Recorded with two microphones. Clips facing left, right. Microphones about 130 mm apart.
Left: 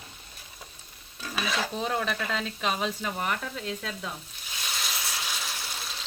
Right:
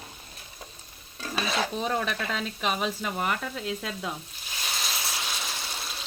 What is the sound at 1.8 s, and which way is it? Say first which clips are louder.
Speech: right 1 dB; centre (ahead or behind).